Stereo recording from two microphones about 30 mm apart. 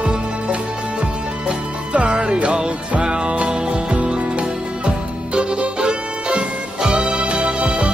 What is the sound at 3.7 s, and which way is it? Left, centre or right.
Music, right.